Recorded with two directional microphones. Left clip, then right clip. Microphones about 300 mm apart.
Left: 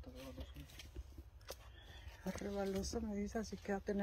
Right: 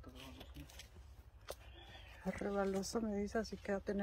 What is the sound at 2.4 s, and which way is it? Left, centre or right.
Speech, centre.